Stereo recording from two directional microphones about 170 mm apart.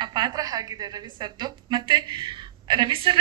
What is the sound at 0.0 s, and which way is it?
A woman's voice, 25° right (ahead or behind).